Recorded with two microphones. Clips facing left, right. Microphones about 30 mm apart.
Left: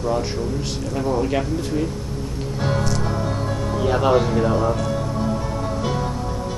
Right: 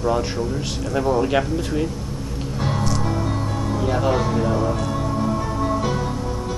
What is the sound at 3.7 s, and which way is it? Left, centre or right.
Speech, centre.